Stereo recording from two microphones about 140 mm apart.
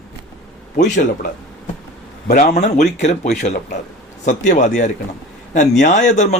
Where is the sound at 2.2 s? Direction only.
75° left (ahead or behind).